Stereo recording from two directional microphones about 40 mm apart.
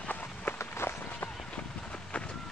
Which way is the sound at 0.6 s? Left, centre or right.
Left.